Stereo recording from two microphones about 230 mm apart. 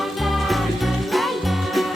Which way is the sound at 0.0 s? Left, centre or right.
Centre.